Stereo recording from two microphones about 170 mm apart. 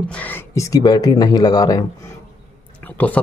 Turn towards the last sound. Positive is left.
turn(degrees=10)  # may be behind; listen again after turning